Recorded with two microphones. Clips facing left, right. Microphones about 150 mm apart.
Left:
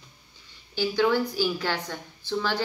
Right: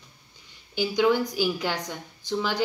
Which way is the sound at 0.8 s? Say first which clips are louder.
Right 1 dB; 15° right (ahead or behind).